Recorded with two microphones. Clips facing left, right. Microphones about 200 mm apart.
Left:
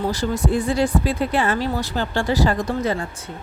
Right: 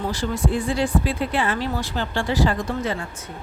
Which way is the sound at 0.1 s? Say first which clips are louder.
Left 2 dB; 40° left (ahead or behind).